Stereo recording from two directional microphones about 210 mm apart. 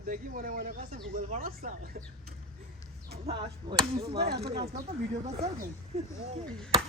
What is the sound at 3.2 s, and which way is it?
Chop, 25° right (ahead or behind).